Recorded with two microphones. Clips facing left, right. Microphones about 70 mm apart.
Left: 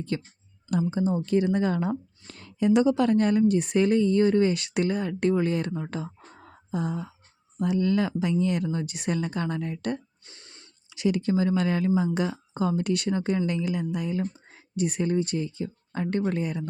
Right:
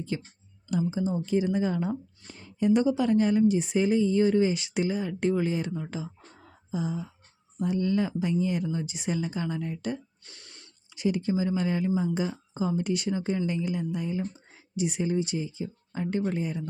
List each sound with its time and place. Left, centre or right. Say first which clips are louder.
0.1 s speech: left 4 dB; left
2.2 s speech: left 1 dB; left
5.9 s a sound: left 2 dB; left
7.6 s speech: left 2 dB; left
10.2 s a sound: even; left
10.8 s speech: left 2 dB; left
14.5 s speech: left 1 dB; left